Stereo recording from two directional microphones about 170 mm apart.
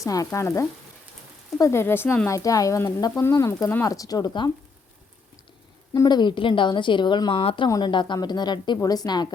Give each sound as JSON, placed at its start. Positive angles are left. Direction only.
{"t": 0.0, "sound": "frying", "side_deg": 20}
{"t": 1.5, "sound": "a woman's voice", "side_deg": 15}
{"t": 5.9, "sound": "a woman's voice", "side_deg": 25}